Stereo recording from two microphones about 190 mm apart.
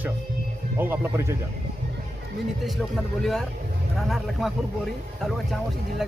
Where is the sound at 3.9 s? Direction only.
Centre (ahead or behind).